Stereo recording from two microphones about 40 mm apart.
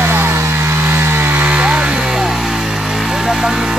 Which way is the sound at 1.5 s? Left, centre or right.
Right.